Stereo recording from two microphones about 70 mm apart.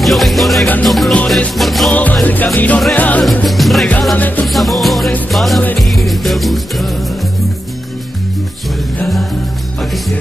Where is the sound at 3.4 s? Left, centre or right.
Centre.